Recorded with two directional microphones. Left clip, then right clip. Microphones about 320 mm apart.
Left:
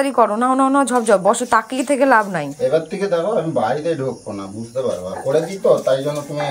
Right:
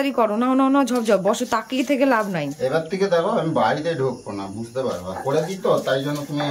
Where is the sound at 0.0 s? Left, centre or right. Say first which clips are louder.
Left 5 dB; centre.